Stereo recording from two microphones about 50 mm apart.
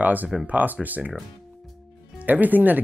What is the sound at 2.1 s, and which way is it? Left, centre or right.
Speech, right.